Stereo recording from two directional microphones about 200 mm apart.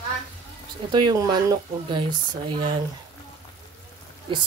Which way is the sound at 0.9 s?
20° right (ahead or behind).